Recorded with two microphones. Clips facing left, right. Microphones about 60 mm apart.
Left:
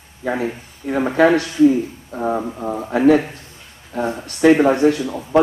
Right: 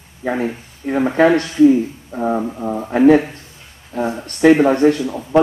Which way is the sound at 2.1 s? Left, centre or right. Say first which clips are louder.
Right 2 dB; centre.